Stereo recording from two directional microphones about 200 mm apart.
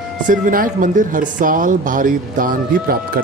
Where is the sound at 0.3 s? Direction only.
45° right (ahead or behind).